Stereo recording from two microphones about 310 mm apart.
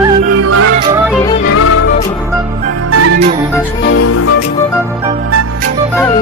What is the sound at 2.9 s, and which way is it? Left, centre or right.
Music, right.